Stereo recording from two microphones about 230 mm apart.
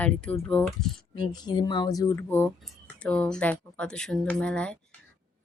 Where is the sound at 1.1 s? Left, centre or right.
Centre.